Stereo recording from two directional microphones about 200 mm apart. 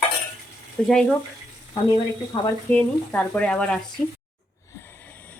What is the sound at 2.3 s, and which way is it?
Speech, 15° left (ahead or behind).